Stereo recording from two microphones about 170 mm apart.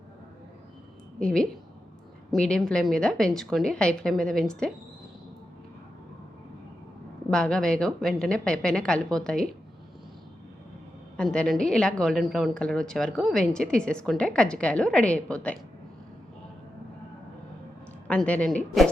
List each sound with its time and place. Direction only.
1.2 s a woman's voice: 5° left (ahead or behind)
7.3 s a woman's voice: 5° left (ahead or behind)
11.2 s a woman's voice: 5° left (ahead or behind)
18.1 s a woman's voice: 5° left (ahead or behind)